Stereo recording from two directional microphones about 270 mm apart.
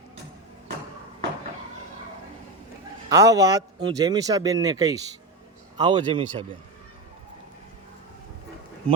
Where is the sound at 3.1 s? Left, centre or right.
Centre.